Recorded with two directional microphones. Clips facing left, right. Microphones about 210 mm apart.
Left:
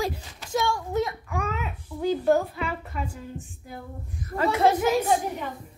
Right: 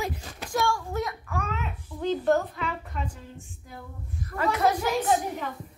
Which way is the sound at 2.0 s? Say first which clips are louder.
Left 2 dB; 10° left (ahead or behind).